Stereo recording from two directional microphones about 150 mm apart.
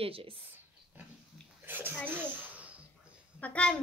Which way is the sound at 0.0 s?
40° right (ahead or behind).